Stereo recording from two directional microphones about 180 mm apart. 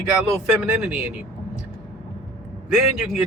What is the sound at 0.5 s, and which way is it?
Speech, 5° right (ahead or behind).